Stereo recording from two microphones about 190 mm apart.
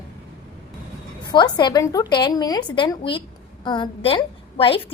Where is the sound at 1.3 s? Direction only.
20° left (ahead or behind).